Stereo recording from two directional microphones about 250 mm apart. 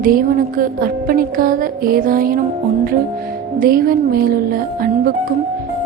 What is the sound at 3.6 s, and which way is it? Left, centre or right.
Speech, right.